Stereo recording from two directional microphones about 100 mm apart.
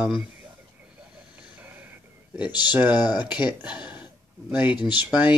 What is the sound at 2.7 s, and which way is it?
Speech, 15° right (ahead or behind).